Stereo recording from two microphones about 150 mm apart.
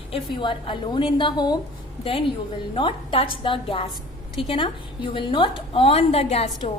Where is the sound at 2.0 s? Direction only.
40° left (ahead or behind).